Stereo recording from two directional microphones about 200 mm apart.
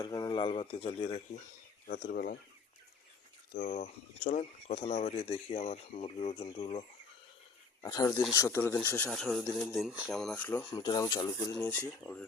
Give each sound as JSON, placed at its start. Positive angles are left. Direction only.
{"t": 0.0, "sound": "speech", "side_deg": 20}
{"t": 2.0, "sound": "speech", "side_deg": 50}
{"t": 3.5, "sound": "speech", "side_deg": 35}
{"t": 7.8, "sound": "speech", "side_deg": 15}
{"t": 10.8, "sound": "speech", "side_deg": 20}